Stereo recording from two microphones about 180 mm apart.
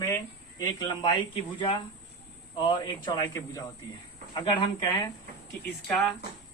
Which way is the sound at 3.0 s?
20° left (ahead or behind).